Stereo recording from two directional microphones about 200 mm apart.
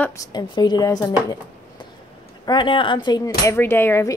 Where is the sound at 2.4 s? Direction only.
25° left (ahead or behind).